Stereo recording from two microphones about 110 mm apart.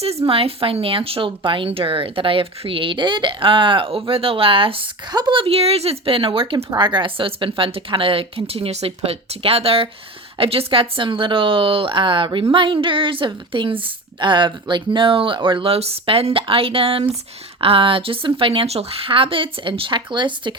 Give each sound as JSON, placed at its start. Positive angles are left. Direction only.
{"t": 0.0, "sound": "speech", "side_deg": -65}
{"t": 5.1, "sound": "speech", "side_deg": -40}
{"t": 5.4, "sound": "a woman's voice", "side_deg": -65}